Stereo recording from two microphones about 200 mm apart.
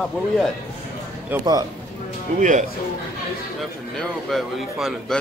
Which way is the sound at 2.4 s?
40° right (ahead or behind).